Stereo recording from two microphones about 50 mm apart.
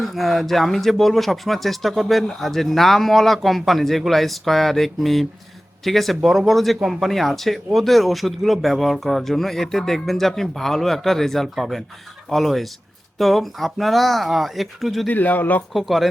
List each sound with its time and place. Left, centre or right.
0.0 s speech: centre
15.0 s speech: left
15.7 s speech: centre